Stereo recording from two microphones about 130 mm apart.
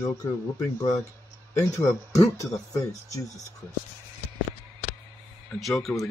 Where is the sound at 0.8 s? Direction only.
25° left (ahead or behind).